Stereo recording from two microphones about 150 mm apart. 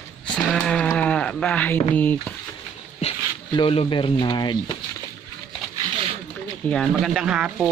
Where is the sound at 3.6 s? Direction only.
35° left (ahead or behind).